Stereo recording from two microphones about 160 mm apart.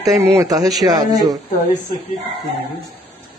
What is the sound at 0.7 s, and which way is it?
Speech, centre (ahead or behind).